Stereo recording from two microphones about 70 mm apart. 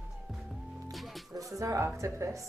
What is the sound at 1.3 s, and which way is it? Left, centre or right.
A woman's voice, right.